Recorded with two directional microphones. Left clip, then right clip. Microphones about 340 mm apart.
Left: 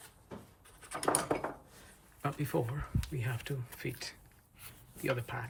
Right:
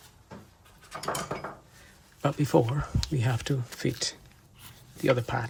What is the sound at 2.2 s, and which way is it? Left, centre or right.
Speech, centre.